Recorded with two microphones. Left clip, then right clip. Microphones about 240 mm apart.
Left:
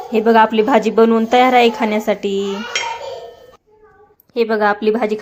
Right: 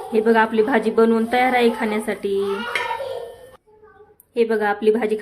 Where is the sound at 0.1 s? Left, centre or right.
Centre.